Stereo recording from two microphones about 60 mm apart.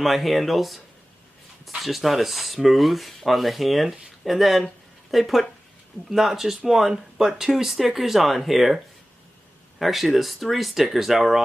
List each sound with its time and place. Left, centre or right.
0.0 s speech: centre